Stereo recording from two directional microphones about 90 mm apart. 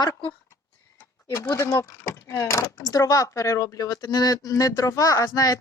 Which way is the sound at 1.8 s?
35° left (ahead or behind).